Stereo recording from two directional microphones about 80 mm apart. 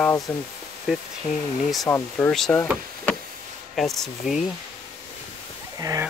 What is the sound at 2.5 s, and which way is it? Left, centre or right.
Speech, centre.